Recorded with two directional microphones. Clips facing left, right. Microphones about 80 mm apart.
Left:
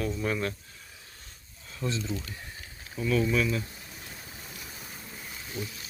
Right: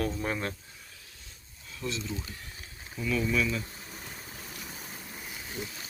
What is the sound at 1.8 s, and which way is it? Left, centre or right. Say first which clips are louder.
Speech: left 3 dB; left.